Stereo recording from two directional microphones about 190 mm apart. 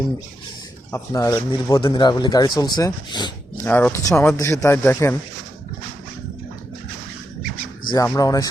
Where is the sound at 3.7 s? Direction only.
10° left (ahead or behind).